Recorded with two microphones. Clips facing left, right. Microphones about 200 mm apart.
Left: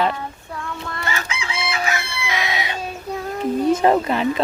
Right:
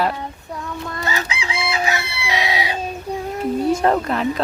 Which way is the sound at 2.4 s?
35° right (ahead or behind).